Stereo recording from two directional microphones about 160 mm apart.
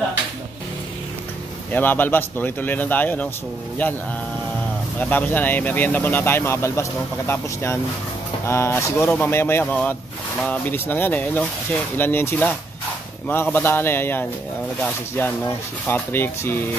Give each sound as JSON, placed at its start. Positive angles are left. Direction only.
{"t": 1.7, "sound": "speech", "side_deg": 10}
{"t": 5.1, "sound": "speech", "side_deg": 10}